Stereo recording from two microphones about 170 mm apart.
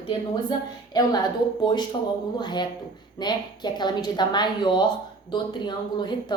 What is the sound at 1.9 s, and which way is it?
Speech, 35° left (ahead or behind).